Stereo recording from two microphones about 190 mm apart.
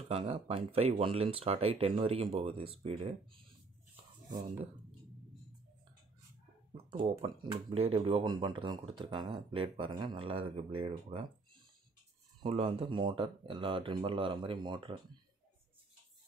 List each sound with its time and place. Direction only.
0.1 s speech: 30° right (ahead or behind)
6.9 s speech: 30° right (ahead or behind)
12.4 s speech: 30° right (ahead or behind)